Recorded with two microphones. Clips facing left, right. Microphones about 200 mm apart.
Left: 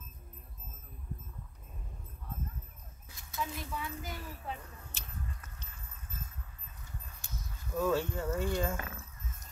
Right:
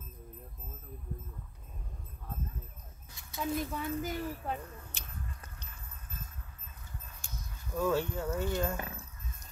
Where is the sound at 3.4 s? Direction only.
40° right (ahead or behind).